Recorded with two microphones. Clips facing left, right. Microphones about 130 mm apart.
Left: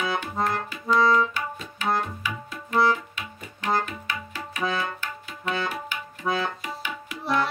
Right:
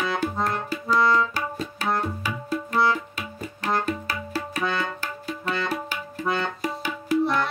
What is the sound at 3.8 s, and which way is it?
Music, 35° right (ahead or behind).